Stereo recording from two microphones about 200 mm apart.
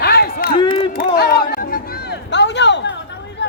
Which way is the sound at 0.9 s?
50° left (ahead or behind).